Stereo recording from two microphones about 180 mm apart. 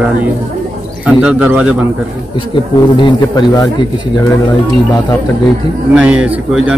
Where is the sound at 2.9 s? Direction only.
25° left (ahead or behind).